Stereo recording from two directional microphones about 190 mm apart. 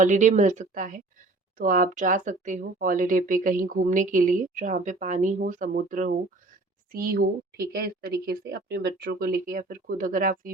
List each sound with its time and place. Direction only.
0.0 s speech: 40° right (ahead or behind)